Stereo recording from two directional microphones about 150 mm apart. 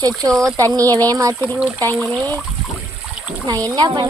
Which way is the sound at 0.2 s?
20° right (ahead or behind).